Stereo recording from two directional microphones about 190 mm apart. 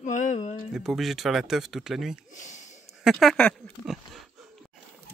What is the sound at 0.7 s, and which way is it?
Speech, centre (ahead or behind).